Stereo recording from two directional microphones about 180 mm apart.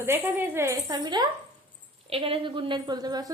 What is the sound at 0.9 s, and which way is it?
A woman's voice, 25° right (ahead or behind).